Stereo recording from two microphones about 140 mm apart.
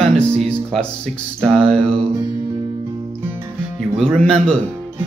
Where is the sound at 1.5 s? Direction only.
5° left (ahead or behind).